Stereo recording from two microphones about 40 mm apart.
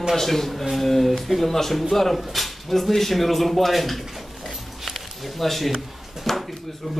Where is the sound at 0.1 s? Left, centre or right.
Centre.